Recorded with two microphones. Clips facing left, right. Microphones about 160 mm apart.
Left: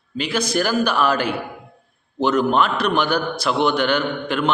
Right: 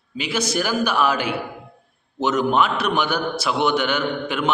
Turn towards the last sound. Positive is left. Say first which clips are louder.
# left 1 dB
turn(degrees=-10)  # may be behind; listen again after turning